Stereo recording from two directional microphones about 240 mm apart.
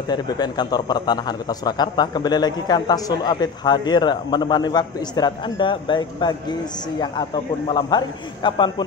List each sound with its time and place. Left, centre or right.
0.1 s a man's voice: centre